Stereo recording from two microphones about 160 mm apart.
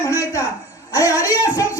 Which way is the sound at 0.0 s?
20° left (ahead or behind).